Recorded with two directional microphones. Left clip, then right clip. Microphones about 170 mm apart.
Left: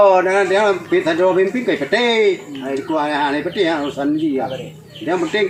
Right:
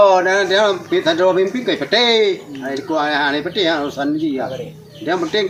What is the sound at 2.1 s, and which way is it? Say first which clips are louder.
Speech: even; 10° left (ahead or behind).